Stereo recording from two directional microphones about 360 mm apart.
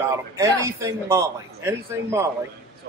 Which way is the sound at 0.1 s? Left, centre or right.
Centre.